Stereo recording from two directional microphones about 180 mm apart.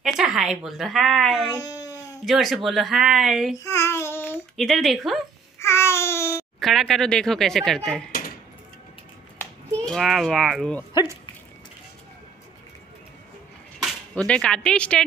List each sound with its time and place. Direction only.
0.0 s a sound: 5° right (ahead or behind)
0.7 s a woman's voice: centre (ahead or behind)
1.6 s babbling: 20° left (ahead or behind)
2.2 s a woman's voice: centre (ahead or behind)
3.5 s child singing: 15° left (ahead or behind)
4.6 s a woman's voice: centre (ahead or behind)
5.6 s babbling: 15° left (ahead or behind)
6.6 s a woman's voice: centre (ahead or behind)
9.4 s speech: centre (ahead or behind)
13.8 s speech: 5° left (ahead or behind)